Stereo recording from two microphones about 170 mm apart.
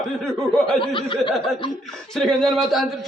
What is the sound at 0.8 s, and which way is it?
Speech, 30° left (ahead or behind).